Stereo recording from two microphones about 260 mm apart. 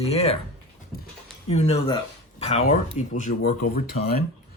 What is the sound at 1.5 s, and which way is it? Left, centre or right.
Speech, left.